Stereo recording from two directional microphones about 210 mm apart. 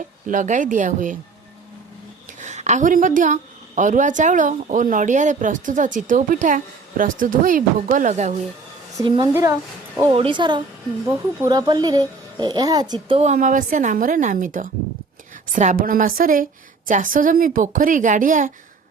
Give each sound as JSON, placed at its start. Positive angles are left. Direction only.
{"t": 0.3, "sound": "speech", "side_deg": -35}
{"t": 2.4, "sound": "a woman's voice", "side_deg": -35}
{"t": 9.0, "sound": "speech", "side_deg": -20}